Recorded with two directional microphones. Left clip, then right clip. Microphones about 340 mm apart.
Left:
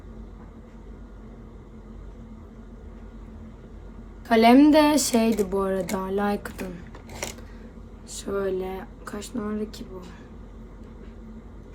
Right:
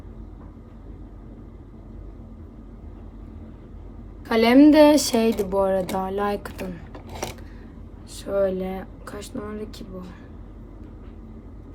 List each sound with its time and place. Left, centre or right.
4.3 s speech: centre
6.9 s a sound: right
8.1 s speech: centre